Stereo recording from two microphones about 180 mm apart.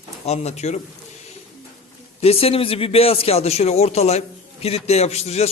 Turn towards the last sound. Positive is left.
turn(degrees=35)  # may be behind; listen again after turning